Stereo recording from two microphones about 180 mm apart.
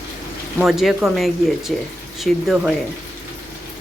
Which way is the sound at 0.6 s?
Centre (ahead or behind).